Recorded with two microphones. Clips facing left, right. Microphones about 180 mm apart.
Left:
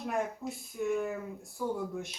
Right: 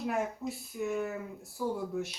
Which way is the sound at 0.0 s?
5° right (ahead or behind).